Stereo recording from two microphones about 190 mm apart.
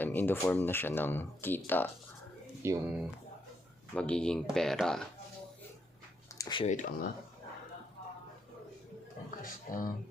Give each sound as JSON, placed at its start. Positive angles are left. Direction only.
{"t": 0.0, "sound": "speech", "side_deg": 10}
{"t": 2.6, "sound": "speech", "side_deg": -15}
{"t": 3.9, "sound": "speech", "side_deg": 5}
{"t": 6.4, "sound": "speech", "side_deg": 25}
{"t": 6.7, "sound": "speech", "side_deg": 40}
{"t": 9.4, "sound": "speech", "side_deg": 45}